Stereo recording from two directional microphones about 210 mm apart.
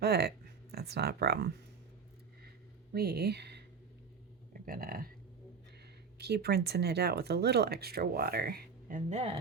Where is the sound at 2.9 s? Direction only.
50° right (ahead or behind); by 9.4 s 30° right (ahead or behind).